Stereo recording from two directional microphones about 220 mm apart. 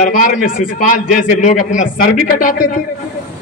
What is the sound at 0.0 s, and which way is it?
A man's voice, 35° left (ahead or behind).